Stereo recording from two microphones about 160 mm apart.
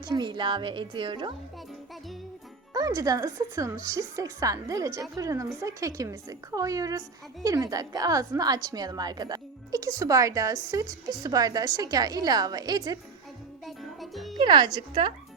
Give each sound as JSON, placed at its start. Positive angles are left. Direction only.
{"t": 0.1, "sound": "a woman's voice", "side_deg": -30}
{"t": 2.7, "sound": "a woman's voice", "side_deg": -25}
{"t": 13.7, "sound": "music", "side_deg": 0}
{"t": 14.3, "sound": "a woman's voice", "side_deg": -30}